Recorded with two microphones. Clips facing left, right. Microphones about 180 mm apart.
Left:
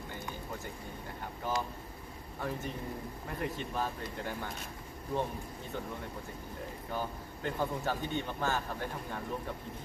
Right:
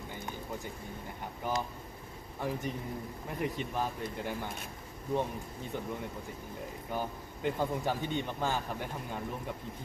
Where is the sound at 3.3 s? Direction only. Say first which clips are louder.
Right 2 dB; 15° right (ahead or behind).